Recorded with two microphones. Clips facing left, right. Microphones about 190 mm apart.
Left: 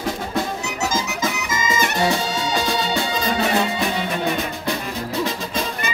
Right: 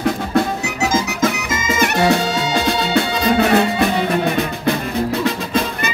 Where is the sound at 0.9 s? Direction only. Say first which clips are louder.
Right 6 dB; 55° right (ahead or behind).